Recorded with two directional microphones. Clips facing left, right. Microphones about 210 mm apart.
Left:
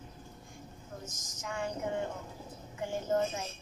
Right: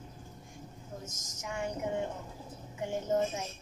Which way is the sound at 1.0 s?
20° right (ahead or behind).